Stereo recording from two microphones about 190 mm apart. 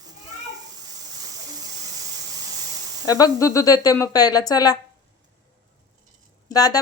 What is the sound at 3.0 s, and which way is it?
A woman's voice, 20° left (ahead or behind).